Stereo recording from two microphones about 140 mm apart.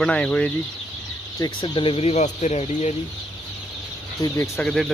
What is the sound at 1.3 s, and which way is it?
Speech, 30° left (ahead or behind).